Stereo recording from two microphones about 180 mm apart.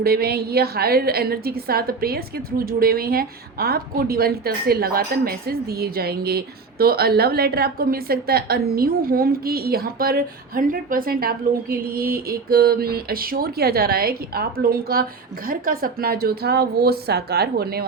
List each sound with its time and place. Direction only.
0.0 s a woman's voice: 60° right (ahead or behind)